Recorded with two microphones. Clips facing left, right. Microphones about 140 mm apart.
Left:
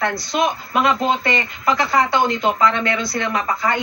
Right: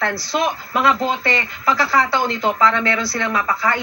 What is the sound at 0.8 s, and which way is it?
Speech, 20° left (ahead or behind).